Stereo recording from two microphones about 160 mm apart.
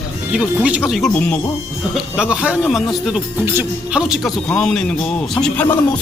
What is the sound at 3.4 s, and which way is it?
Speech, 15° right (ahead or behind).